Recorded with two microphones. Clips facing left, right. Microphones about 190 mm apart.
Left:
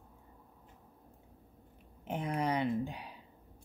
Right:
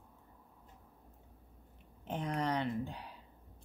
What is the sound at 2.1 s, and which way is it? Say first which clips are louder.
Speech: left 2 dB; 10° left (ahead or behind).